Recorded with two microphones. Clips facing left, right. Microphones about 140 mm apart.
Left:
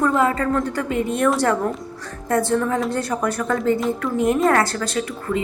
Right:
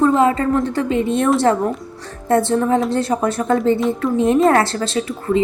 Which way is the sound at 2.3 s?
25° right (ahead or behind).